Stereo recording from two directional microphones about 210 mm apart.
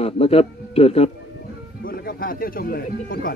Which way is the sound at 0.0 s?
30° left (ahead or behind).